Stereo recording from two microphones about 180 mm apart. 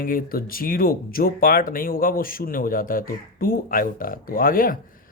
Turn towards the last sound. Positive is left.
turn(degrees=50)  # may be behind; listen again after turning